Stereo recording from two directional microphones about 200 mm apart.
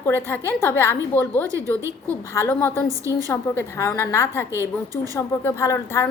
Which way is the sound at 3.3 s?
10° left (ahead or behind).